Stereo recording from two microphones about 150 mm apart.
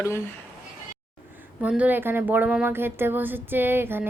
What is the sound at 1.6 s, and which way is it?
Speech, 10° right (ahead or behind).